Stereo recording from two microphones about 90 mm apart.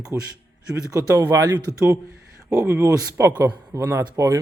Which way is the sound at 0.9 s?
40° right (ahead or behind).